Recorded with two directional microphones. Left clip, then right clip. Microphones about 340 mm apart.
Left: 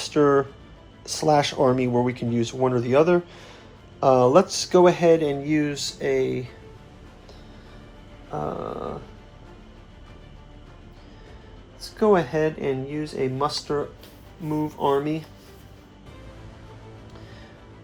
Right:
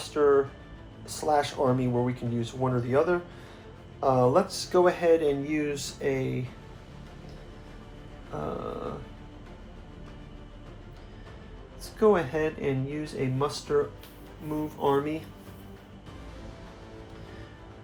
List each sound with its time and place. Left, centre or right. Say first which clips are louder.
0.0 s speech: left 3 dB; left
8.3 s speech: left 6 dB; left
11.8 s speech: left 3 dB; left